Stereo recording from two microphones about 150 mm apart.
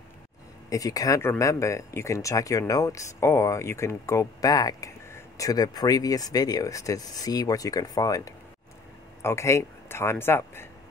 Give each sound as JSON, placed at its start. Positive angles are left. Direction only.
{"t": 0.7, "sound": "a man's voice", "side_deg": 20}